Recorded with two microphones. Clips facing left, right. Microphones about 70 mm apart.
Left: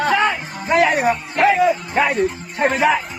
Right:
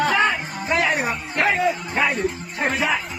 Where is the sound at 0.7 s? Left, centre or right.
Left.